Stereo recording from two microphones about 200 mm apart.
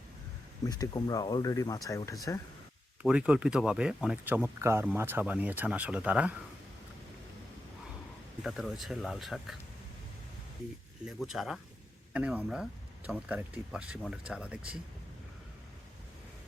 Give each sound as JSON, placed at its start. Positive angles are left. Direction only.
{"t": 0.6, "sound": "speech", "side_deg": 20}
{"t": 3.0, "sound": "speech", "side_deg": -5}
{"t": 8.4, "sound": "speech", "side_deg": 0}
{"t": 11.0, "sound": "speech", "side_deg": 0}